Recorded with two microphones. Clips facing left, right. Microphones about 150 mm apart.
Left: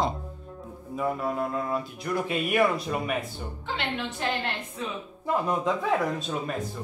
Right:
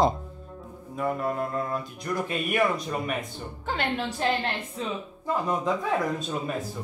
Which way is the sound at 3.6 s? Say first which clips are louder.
Right 3 dB; 45° right (ahead or behind).